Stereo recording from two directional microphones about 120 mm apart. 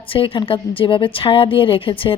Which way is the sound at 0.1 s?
50° left (ahead or behind).